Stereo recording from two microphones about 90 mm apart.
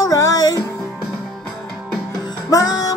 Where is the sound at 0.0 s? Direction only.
40° left (ahead or behind).